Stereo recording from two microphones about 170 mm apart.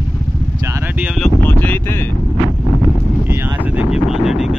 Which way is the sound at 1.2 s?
10° left (ahead or behind).